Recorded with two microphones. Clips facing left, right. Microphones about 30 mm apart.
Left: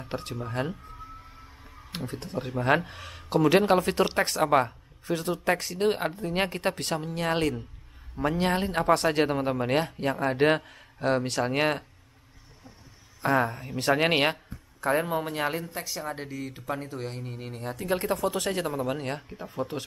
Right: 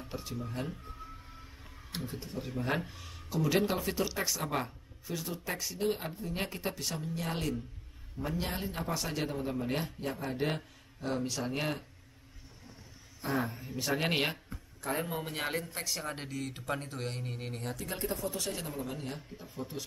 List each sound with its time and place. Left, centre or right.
0.1 s speech: left
1.9 s speech: left
2.1 s speech: left
13.4 s speech: left
15.3 s speech: centre
17.9 s speech: left
18.8 s speech: left